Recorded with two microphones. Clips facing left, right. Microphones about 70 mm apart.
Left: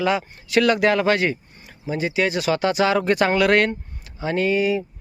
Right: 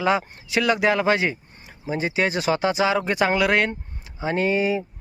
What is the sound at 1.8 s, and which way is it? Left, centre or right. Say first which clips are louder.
Speech: left 1 dB; right.